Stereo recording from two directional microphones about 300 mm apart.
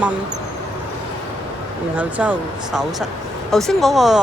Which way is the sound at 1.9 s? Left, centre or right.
Centre.